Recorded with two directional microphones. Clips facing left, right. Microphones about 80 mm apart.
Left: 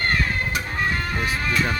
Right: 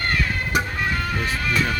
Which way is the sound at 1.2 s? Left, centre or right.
Left.